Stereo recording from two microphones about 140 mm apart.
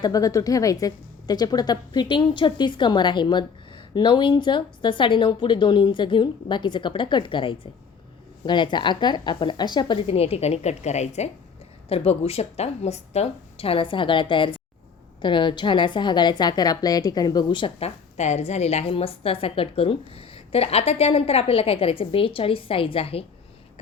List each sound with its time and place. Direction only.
0.0 s a woman's voice: 25° left (ahead or behind)
10.1 s a woman's voice: 45° left (ahead or behind)